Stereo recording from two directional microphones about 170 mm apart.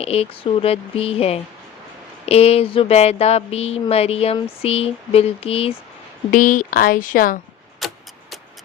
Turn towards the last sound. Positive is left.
turn(degrees=0)  # may be behind; listen again after turning